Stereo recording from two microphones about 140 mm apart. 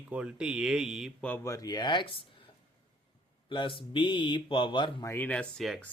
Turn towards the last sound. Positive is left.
turn(degrees=5)  # may be behind; listen again after turning